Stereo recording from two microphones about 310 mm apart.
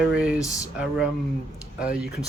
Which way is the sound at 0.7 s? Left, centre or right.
Centre.